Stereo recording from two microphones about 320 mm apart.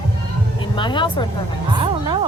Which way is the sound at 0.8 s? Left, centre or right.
Centre.